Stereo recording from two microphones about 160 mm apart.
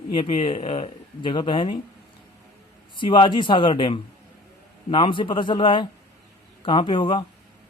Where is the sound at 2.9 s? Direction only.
30° left (ahead or behind).